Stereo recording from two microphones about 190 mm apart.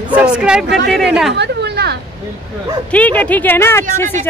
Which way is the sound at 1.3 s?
60° right (ahead or behind).